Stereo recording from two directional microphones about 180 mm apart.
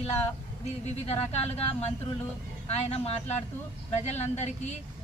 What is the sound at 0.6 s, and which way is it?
A man's voice, 35° left (ahead or behind).